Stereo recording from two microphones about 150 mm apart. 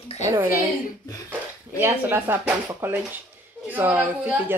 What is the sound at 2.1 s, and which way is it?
Speech, 15° right (ahead or behind).